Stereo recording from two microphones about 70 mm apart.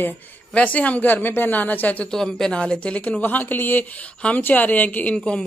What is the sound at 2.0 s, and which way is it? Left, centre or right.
A man's voice, centre.